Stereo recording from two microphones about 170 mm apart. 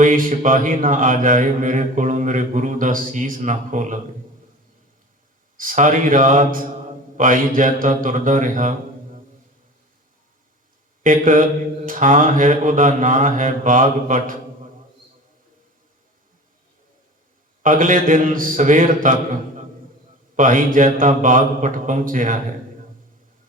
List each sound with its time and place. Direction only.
0.0 s speech: 55° right (ahead or behind)
5.5 s speech: 50° right (ahead or behind)
11.0 s speech: 50° right (ahead or behind)
17.6 s speech: 50° right (ahead or behind)
20.3 s speech: 50° right (ahead or behind)